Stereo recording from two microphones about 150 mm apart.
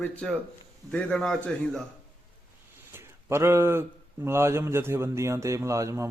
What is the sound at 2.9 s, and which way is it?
Speech, 15° right (ahead or behind).